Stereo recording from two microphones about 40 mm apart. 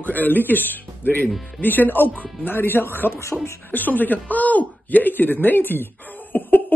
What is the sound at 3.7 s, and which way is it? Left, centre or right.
Speech, left.